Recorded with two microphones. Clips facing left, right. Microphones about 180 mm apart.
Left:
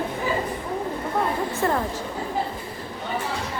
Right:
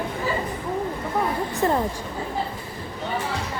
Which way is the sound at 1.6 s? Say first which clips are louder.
Right 2 dB; 20° right (ahead or behind).